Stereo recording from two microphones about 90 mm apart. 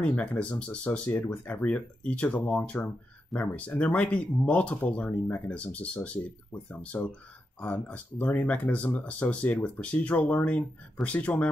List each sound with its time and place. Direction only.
0.0 s speech: 20° left (ahead or behind)